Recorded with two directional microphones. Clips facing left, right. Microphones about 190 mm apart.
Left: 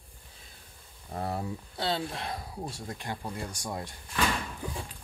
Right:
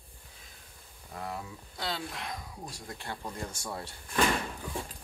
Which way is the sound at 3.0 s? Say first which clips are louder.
Even; 10° left (ahead or behind).